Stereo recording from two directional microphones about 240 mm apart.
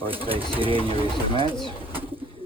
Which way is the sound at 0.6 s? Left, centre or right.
Right.